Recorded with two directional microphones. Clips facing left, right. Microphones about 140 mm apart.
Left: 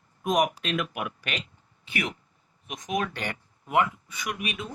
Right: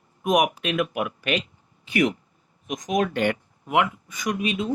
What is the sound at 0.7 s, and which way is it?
Speech, 45° right (ahead or behind).